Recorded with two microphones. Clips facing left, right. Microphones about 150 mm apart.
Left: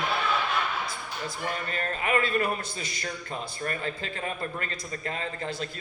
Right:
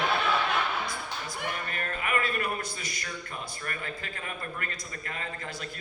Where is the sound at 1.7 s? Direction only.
30° left (ahead or behind).